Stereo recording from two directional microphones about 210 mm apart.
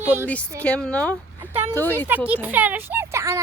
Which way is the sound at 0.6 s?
5° left (ahead or behind).